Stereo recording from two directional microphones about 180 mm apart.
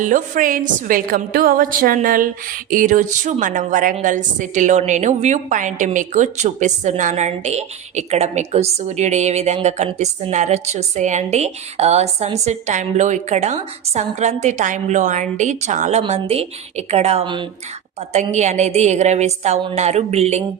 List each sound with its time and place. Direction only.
0.0 s a woman's voice: 45° right (ahead or behind)